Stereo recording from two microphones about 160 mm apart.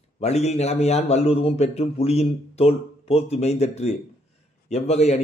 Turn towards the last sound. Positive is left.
turn(degrees=40)  # may be behind; listen again after turning